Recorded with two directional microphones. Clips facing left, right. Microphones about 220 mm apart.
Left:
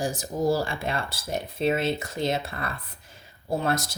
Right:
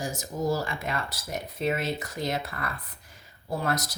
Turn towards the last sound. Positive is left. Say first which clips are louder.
# left 3 dB
turn(degrees=25)  # may be behind; listen again after turning